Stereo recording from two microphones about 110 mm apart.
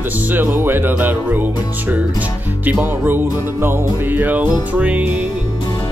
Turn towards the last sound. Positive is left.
turn(degrees=-15)  # may be behind; listen again after turning